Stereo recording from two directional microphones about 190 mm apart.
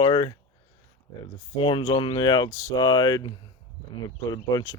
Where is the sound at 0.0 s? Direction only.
25° left (ahead or behind).